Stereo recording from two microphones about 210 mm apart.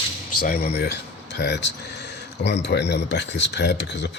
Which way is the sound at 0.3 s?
40° left (ahead or behind).